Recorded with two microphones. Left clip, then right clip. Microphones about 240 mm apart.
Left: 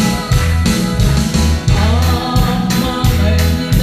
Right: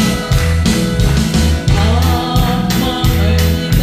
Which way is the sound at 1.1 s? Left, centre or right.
Right.